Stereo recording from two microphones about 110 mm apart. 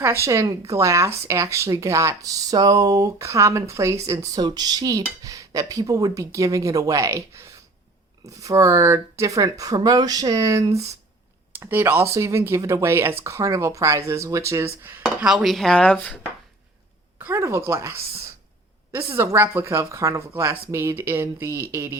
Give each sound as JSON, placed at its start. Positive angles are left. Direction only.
{"t": 0.0, "sound": "speech", "side_deg": -25}
{"t": 11.5, "sound": "speech", "side_deg": -20}
{"t": 14.8, "sound": "dishes", "side_deg": -15}
{"t": 17.2, "sound": "a woman's voice", "side_deg": -20}